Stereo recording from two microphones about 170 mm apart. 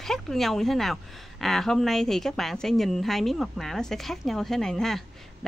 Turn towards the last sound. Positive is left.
turn(degrees=0)  # may be behind; listen again after turning